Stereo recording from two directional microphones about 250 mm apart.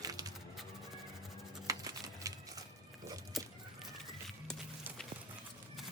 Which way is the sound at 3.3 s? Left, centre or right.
Centre.